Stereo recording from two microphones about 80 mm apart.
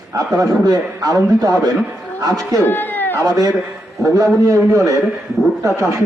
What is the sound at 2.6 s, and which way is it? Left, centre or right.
Speech, left.